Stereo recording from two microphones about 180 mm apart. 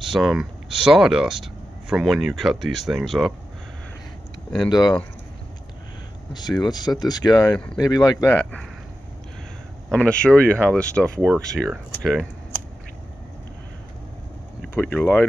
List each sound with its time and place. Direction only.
0.0 s speech: centre (ahead or behind)
4.6 s speech: 20° left (ahead or behind)
6.6 s speech: 25° left (ahead or behind)
7.5 s speech: 5° left (ahead or behind)
7.8 s speech: 20° left (ahead or behind)
9.8 s speech: 5° left (ahead or behind)
14.6 s speech: 10° left (ahead or behind)